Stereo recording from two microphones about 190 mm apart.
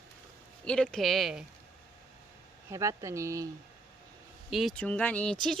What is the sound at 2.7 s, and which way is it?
Speech, 15° right (ahead or behind).